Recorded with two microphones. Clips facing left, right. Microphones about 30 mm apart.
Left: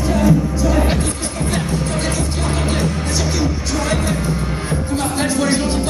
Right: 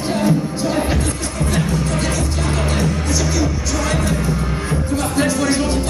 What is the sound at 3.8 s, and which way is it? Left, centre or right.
Music, centre.